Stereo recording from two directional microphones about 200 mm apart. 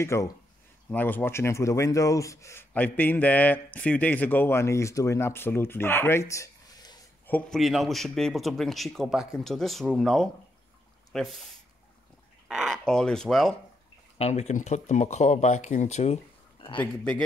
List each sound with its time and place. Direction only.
0.0 s speech: 15° left (ahead or behind)
7.2 s a man's voice: 5° left (ahead or behind)
12.4 s speech: centre (ahead or behind)
14.1 s speech: 30° left (ahead or behind)
16.7 s speech: 5° left (ahead or behind)